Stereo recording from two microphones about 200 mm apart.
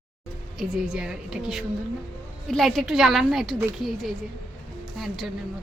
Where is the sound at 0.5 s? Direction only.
Centre (ahead or behind).